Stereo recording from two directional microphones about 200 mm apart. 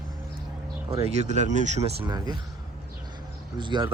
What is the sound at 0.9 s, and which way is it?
Speech, 30° right (ahead or behind).